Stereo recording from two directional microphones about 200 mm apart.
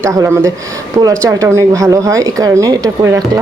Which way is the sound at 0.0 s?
15° right (ahead or behind).